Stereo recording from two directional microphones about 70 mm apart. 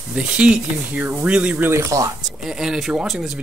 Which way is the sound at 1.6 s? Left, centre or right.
Right.